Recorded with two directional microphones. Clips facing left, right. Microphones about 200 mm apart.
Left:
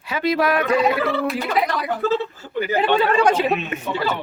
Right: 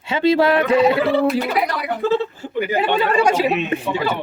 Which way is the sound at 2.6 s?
15° right (ahead or behind).